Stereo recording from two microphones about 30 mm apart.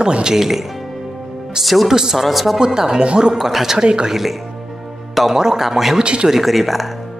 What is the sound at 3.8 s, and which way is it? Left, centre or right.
Speech, right.